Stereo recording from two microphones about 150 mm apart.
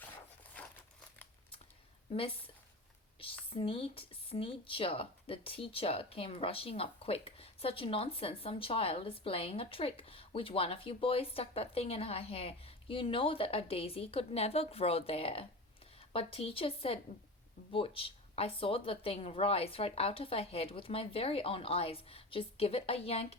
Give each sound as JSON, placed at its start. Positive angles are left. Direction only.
{"t": 0.6, "sound": "crumpling", "side_deg": 10}
{"t": 3.5, "sound": "speech", "side_deg": 35}